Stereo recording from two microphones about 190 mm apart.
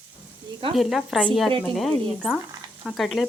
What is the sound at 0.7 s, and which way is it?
Speech, centre (ahead or behind).